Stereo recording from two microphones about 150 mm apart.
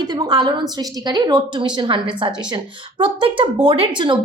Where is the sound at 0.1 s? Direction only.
30° right (ahead or behind).